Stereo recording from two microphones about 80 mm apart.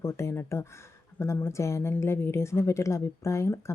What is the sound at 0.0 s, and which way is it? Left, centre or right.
Speech, left.